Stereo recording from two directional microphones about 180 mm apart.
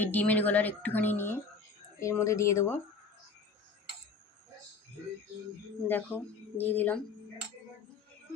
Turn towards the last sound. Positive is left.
turn(degrees=10)  # may be behind; listen again after turning